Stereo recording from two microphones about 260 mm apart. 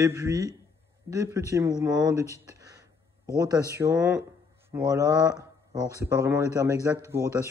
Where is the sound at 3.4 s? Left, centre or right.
Centre.